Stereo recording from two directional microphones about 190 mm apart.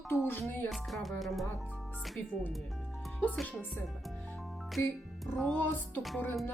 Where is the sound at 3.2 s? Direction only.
10° left (ahead or behind).